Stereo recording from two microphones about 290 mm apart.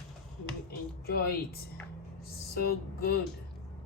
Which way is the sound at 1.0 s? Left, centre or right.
Left.